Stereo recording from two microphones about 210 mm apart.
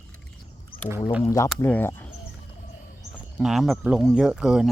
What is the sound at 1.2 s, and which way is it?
Speech, 15° left (ahead or behind).